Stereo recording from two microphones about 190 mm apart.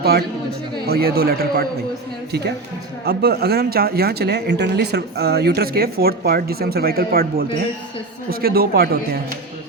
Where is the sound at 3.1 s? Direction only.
55° right (ahead or behind).